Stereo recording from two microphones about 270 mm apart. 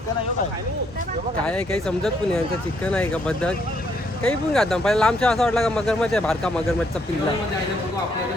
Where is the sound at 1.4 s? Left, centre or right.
Centre.